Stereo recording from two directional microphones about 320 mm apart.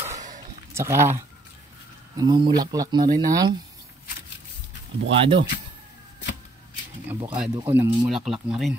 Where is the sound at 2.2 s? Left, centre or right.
Centre.